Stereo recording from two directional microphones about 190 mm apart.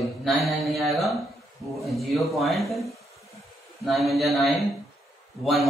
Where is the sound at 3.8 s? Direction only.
Centre (ahead or behind).